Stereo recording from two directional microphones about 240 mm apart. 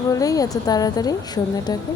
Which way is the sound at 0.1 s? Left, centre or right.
Centre.